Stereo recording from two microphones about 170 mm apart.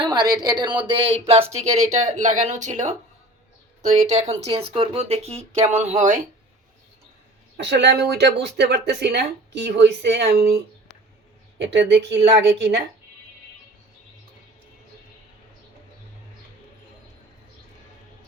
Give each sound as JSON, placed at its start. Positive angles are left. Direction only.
{"t": 0.0, "sound": "speech", "side_deg": -25}
{"t": 7.5, "sound": "speech", "side_deg": -90}
{"t": 11.6, "sound": "speech", "side_deg": -90}